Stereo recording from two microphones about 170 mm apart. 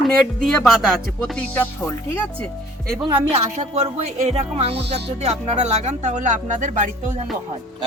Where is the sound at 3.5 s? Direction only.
40° right (ahead or behind).